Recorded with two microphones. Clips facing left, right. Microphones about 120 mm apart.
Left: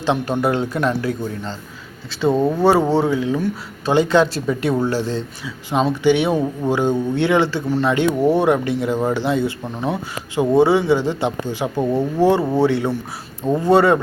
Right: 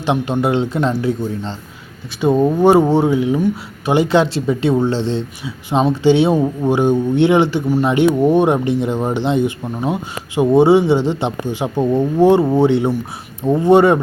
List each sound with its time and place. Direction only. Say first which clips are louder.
0.0 s speech: right 2 dB; 20° right (ahead or behind)